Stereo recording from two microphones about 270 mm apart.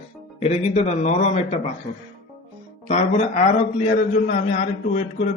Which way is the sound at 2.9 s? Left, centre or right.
Left.